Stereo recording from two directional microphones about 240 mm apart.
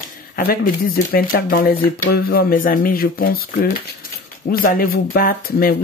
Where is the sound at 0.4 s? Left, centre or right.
Left.